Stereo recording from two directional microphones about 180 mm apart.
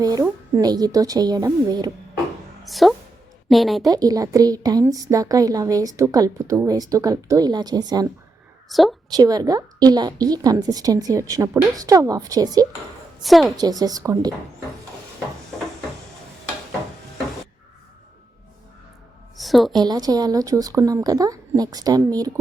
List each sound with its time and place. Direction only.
0.0 s a woman's voice: 20° right (ahead or behind)
2.6 s a woman's voice: centre (ahead or behind)
3.8 s a woman's voice: 20° right (ahead or behind)
8.7 s a woman's voice: centre (ahead or behind)
9.1 s a woman's voice: 20° right (ahead or behind)
13.2 s a woman's voice: centre (ahead or behind)
13.6 s a woman's voice: 20° right (ahead or behind)
19.4 s a woman's voice: centre (ahead or behind)
19.8 s a woman's voice: 20° right (ahead or behind)